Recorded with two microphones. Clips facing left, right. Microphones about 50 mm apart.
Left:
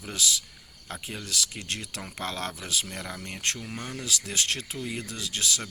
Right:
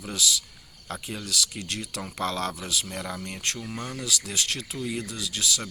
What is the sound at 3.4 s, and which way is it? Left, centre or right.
Speech, left.